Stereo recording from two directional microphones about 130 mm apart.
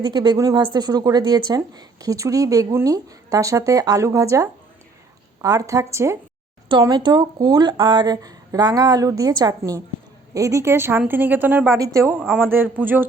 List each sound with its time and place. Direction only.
0.0 s a woman's voice: 35° right (ahead or behind)
6.7 s a woman's voice: 35° right (ahead or behind); by 13.1 s 15° right (ahead or behind)